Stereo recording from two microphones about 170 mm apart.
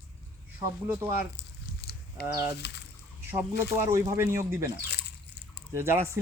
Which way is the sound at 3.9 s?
15° right (ahead or behind).